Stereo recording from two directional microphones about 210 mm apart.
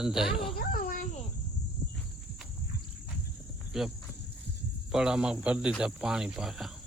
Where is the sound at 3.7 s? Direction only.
Centre (ahead or behind).